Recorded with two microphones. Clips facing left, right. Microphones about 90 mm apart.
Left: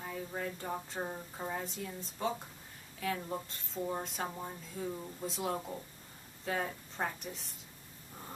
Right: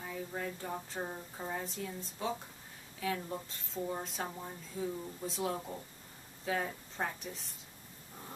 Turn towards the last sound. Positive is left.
turn(degrees=0)  # may be behind; listen again after turning